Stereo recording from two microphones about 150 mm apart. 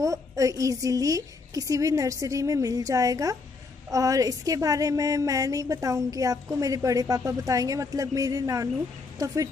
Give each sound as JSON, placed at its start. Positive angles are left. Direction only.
{"t": 0.0, "sound": "a woman's voice", "side_deg": -20}